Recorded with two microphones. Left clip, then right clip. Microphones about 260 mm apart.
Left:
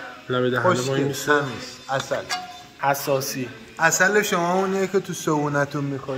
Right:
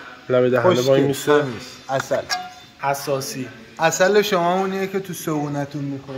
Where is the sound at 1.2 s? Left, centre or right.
Right.